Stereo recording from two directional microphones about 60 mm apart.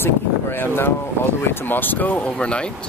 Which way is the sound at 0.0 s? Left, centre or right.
Left.